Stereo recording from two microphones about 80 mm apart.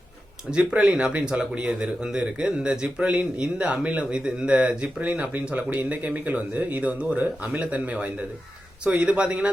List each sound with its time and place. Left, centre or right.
0.5 s speech: centre